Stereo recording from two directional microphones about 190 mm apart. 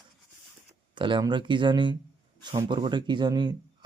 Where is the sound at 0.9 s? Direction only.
25° right (ahead or behind).